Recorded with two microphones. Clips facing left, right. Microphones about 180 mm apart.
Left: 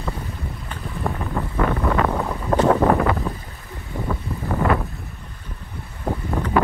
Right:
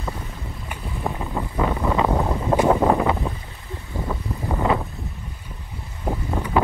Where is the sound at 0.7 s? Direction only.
15° right (ahead or behind).